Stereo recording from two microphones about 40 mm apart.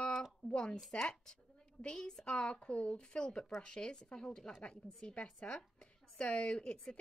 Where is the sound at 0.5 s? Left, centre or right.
Left.